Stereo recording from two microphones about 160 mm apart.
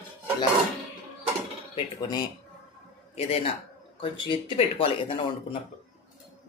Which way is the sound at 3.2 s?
40° left (ahead or behind).